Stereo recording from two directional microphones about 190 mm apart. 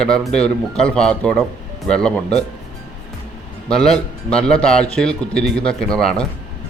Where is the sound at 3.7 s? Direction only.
5° left (ahead or behind).